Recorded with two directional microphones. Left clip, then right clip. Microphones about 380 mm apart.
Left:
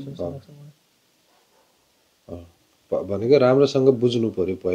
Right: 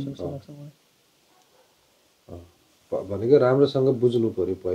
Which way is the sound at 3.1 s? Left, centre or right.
Left.